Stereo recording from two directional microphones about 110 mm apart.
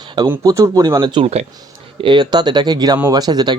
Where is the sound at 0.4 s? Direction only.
30° right (ahead or behind).